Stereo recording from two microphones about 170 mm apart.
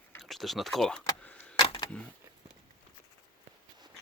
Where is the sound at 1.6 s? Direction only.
25° left (ahead or behind).